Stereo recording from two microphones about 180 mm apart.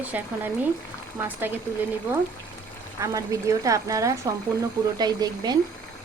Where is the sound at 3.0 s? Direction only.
20° right (ahead or behind).